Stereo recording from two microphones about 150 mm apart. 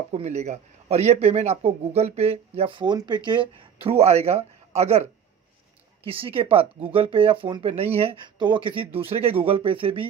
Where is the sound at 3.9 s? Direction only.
45° right (ahead or behind).